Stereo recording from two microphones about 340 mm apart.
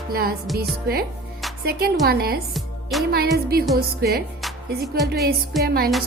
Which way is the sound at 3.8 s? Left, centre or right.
Right.